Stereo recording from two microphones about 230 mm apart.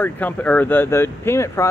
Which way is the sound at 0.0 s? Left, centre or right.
Centre.